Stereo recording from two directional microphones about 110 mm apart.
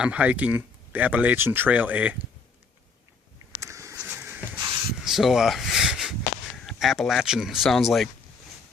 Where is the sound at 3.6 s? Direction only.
25° right (ahead or behind).